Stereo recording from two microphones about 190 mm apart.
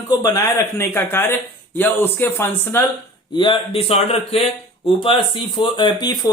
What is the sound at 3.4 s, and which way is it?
Speech, 25° left (ahead or behind).